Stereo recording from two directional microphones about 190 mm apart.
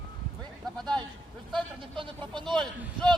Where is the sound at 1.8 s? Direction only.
25° right (ahead or behind).